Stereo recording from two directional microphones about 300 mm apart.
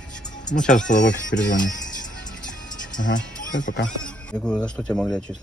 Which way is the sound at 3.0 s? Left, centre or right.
Left.